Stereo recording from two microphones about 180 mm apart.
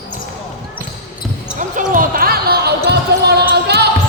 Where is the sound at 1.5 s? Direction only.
45° right (ahead or behind); by 3.8 s 65° right (ahead or behind).